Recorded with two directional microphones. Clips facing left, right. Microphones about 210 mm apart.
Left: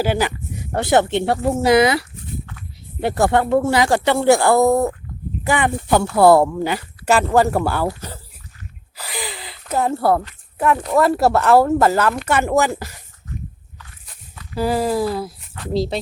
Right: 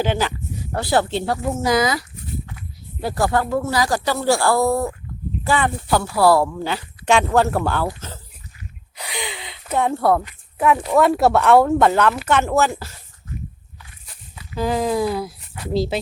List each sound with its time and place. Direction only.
0.0 s speech: 10° left (ahead or behind)
0.7 s speech: 20° left (ahead or behind)
1.6 s speech: 65° left (ahead or behind)
3.0 s speech: 25° left (ahead or behind)
9.0 s a sound: centre (ahead or behind)
10.6 s speech: centre (ahead or behind); by 13.0 s 15° left (ahead or behind)
14.5 s speech: 10° left (ahead or behind)